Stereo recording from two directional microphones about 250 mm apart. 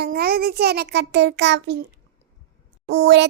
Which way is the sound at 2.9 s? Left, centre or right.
Right.